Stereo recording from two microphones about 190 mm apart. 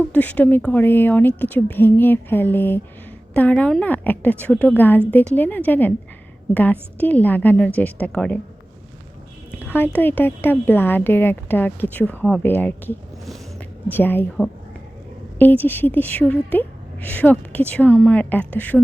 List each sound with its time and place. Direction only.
0.1 s a woman's voice: 10° left (ahead or behind)
9.5 s a woman's voice: 10° left (ahead or behind)